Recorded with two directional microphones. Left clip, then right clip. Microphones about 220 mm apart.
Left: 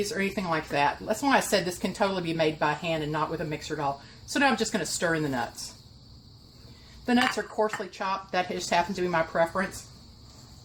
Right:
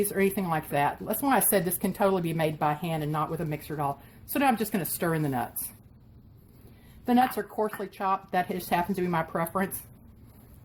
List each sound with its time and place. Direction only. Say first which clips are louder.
0.1 s speech: right 1 dB; 35° right (ahead or behind)
7.0 s speech: right 1 dB; 35° right (ahead or behind)